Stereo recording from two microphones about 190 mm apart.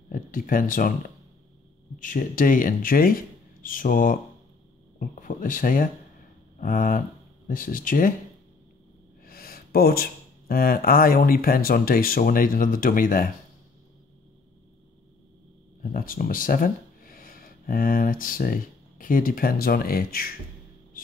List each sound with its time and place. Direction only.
0.1 s speech: 45° left (ahead or behind)
9.2 s a sound: 55° left (ahead or behind)
10.5 s speech: 50° left (ahead or behind)
15.8 s speech: 50° left (ahead or behind)